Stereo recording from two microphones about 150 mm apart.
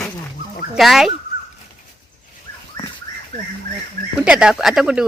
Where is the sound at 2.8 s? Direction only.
30° left (ahead or behind).